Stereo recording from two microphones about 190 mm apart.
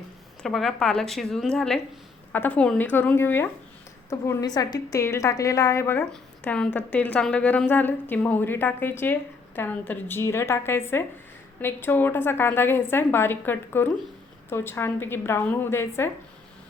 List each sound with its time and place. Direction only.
0.4 s a woman's voice: centre (ahead or behind)